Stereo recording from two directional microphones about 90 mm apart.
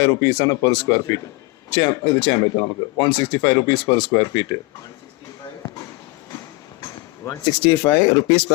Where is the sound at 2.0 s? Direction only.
90° left.